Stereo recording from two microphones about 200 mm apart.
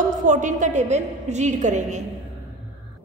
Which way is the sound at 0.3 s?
40° right (ahead or behind).